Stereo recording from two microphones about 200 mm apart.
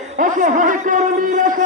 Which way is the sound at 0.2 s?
40° right (ahead or behind).